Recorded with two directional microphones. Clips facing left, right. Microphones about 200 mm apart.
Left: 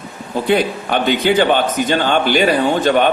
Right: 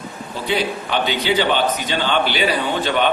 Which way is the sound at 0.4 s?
50° left (ahead or behind).